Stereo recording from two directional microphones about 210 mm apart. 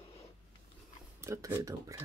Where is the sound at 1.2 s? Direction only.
15° right (ahead or behind).